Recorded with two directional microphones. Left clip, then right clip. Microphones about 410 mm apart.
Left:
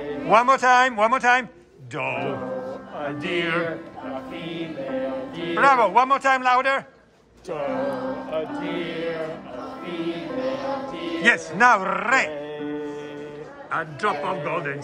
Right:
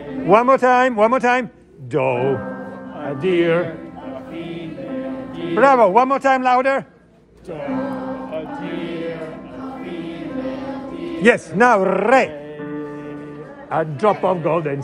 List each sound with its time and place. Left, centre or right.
0.3 s a man's voice: centre
4.4 s music: left
5.6 s a man's voice: centre
8.3 s music: left
11.2 s a man's voice: centre
13.7 s a man's voice: centre